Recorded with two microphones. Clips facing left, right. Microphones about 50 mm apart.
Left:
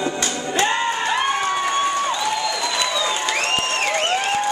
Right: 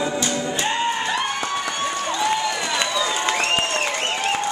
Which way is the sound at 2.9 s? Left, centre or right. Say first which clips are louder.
Left 1 dB; centre.